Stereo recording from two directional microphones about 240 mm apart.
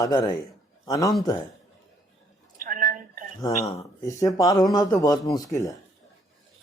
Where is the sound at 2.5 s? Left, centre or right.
Right.